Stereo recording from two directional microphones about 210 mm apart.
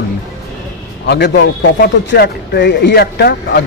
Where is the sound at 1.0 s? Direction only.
55° left (ahead or behind).